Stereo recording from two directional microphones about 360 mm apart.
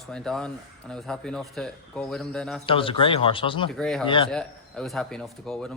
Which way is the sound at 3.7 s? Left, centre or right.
Centre.